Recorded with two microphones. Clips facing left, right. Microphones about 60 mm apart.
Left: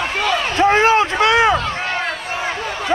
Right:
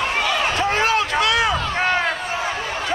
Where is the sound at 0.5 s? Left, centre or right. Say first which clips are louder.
Left 10 dB; left.